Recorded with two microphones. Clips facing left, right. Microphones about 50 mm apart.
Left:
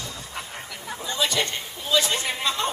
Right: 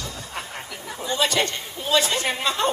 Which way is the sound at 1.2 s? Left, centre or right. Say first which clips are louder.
Right 2 dB; right.